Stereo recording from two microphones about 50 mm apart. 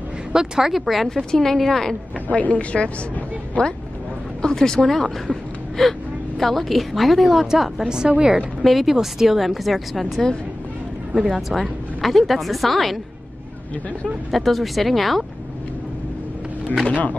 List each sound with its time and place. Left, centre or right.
0.3 s speech: centre
1.3 s a woman's voice: centre
2.2 s a woman's voice: left
4.4 s a woman's voice: centre; by 8.4 s right
8.4 s speech: centre
14.3 s speech: centre
16.8 s speech: left